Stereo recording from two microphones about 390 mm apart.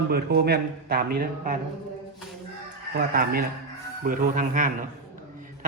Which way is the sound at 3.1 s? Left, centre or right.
Right.